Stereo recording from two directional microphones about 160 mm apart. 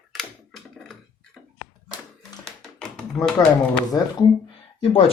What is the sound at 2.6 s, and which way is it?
Tap, 5° left (ahead or behind).